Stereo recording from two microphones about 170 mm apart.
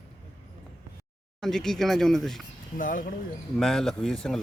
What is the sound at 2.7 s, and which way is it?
Speech, 50° left (ahead or behind).